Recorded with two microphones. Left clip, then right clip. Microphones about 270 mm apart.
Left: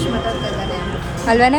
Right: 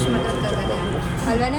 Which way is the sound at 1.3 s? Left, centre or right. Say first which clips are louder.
Left 9 dB; left.